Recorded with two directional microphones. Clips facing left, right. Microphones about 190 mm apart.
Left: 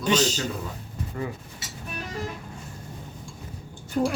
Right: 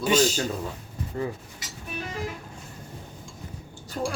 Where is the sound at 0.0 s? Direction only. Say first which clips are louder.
Right 1 dB; 10° right (ahead or behind).